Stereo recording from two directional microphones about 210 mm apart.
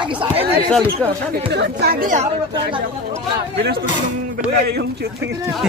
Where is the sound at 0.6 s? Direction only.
5° left (ahead or behind).